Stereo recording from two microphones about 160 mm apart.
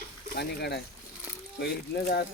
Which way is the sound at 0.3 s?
90° left.